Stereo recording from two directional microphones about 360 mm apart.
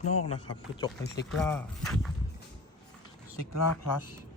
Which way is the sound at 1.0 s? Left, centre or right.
Left.